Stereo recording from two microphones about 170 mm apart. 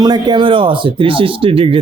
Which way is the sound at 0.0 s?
25° right (ahead or behind).